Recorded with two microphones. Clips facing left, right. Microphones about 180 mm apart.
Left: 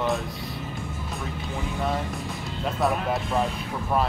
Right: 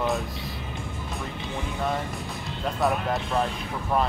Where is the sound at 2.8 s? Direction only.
Centre (ahead or behind).